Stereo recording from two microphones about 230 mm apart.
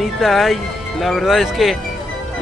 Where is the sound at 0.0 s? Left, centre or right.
Centre.